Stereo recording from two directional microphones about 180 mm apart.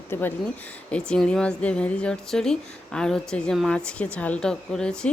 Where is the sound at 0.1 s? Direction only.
10° left (ahead or behind).